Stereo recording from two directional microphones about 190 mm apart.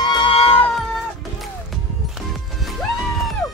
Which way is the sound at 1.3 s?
Centre (ahead or behind).